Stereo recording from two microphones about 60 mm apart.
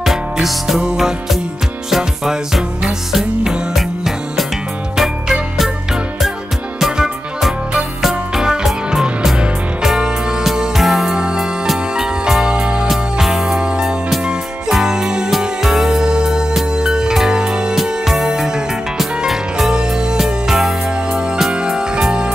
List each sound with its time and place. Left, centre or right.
0.0 s music: centre
6.8 s music: centre